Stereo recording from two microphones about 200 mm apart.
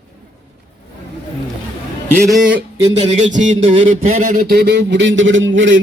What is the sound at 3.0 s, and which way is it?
Speech, 35° right (ahead or behind).